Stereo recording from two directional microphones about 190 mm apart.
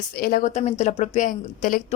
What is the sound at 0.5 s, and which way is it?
Speech, 35° left (ahead or behind).